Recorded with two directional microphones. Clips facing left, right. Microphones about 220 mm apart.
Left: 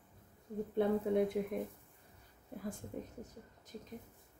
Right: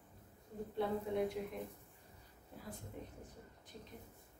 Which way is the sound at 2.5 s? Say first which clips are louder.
Left 9 dB; 55° left (ahead or behind).